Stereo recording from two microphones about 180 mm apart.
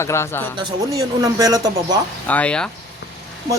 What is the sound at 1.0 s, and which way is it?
Speech, 20° right (ahead or behind).